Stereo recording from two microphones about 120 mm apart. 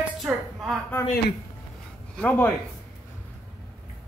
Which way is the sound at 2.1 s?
10° left (ahead or behind).